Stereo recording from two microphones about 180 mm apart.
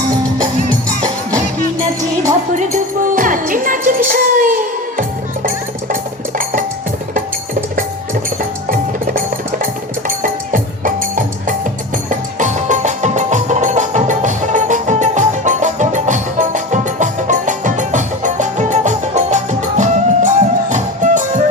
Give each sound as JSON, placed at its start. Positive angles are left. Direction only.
{"t": 2.6, "sound": "music", "side_deg": -45}
{"t": 8.7, "sound": "music", "side_deg": -50}